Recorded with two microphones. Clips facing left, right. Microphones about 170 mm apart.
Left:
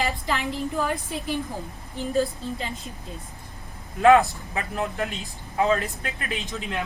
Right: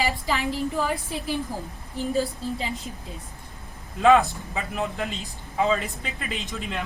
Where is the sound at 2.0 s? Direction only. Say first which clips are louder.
Right 2 dB; centre (ahead or behind).